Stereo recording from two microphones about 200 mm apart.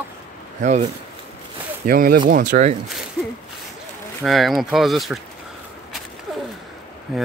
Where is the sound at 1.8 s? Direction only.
45° right (ahead or behind).